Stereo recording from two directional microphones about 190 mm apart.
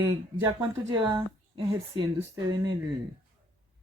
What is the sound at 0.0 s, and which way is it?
A woman's voice, 15° right (ahead or behind).